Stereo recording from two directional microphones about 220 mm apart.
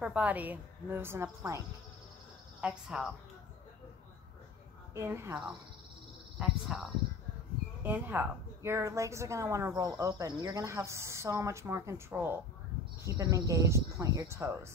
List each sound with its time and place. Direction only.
0.0 s a woman's voice: 5° right (ahead or behind)
2.6 s a woman's voice: 5° right (ahead or behind)
4.9 s a woman's voice: 10° right (ahead or behind)